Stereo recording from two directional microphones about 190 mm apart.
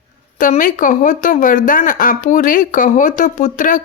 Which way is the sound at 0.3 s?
45° left (ahead or behind).